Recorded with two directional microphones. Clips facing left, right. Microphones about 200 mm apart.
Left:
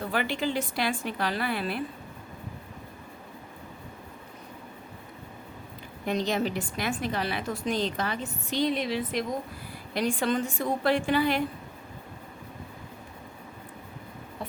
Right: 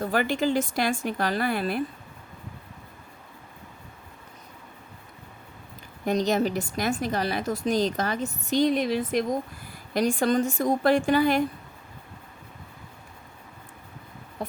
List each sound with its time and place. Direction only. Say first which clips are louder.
0.0 s a woman's voice: right 4 dB; 45° right (ahead or behind)
6.1 s a woman's voice: right 4 dB; 45° right (ahead or behind)